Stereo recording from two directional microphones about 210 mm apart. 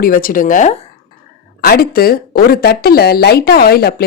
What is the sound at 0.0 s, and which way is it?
Speech, 40° left (ahead or behind).